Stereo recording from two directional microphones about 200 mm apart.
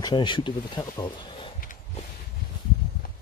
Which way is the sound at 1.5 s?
40° left (ahead or behind).